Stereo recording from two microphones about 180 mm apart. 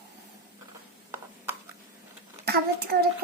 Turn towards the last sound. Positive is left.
turn(degrees=-60)  # may be behind; listen again after turning